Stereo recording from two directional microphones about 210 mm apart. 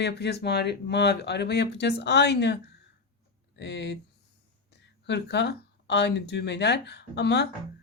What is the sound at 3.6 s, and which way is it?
Speech, 55° left (ahead or behind).